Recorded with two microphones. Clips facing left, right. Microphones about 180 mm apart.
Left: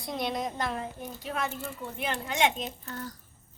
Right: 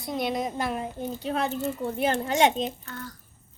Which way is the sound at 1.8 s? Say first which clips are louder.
Right 7 dB; 45° right (ahead or behind).